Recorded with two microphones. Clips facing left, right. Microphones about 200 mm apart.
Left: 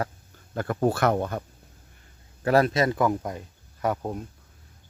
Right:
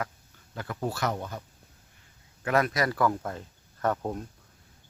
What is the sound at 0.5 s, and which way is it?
Speech, 50° left (ahead or behind).